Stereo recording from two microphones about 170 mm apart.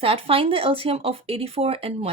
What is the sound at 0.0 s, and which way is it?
Speech, 35° right (ahead or behind).